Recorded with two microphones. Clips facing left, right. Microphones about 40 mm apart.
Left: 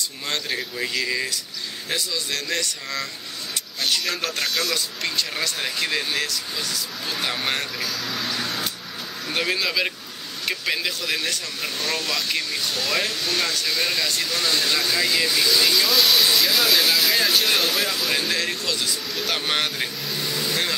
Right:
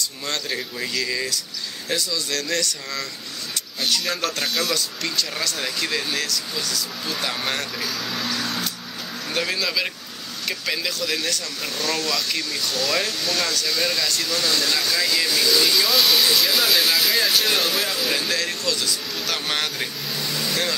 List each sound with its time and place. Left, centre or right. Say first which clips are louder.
0.0 s speech: even; left
4.4 s speech: right 1 dB; centre
4.7 s speech: even; left
8.3 s vehicle: right 1 dB; left
9.3 s speech: left 1 dB; left
15.7 s speech: even; centre
18.3 s speech: even; left